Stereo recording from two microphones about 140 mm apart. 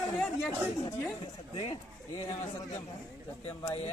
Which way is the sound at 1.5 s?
40° left (ahead or behind).